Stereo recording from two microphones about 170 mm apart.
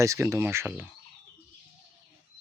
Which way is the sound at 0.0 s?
15° right (ahead or behind).